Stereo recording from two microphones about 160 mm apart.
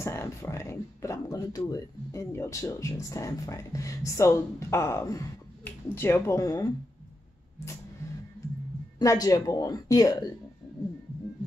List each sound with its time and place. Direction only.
0.0 s a sound: 15° left (ahead or behind)
1.7 s speech: 20° left (ahead or behind)
9.0 s speech: 20° left (ahead or behind)